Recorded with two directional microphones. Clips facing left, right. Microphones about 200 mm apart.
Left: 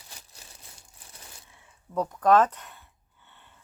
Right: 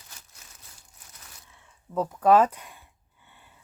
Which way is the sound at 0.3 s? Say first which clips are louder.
Left 3 dB; 30° left (ahead or behind).